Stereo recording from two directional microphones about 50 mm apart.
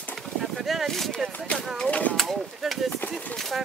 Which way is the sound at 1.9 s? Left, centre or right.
Left.